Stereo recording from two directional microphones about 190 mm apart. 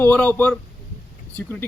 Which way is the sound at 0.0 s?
10° left (ahead or behind).